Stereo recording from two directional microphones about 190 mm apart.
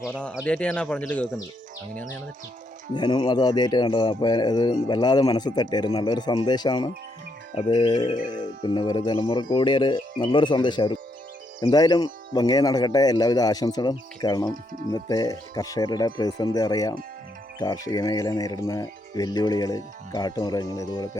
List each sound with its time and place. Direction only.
0.1 s speech: 5° left (ahead or behind)
2.9 s a man's voice: 20° left (ahead or behind)
14.5 s speech: 45° right (ahead or behind)
14.9 s a man's voice: 20° left (ahead or behind)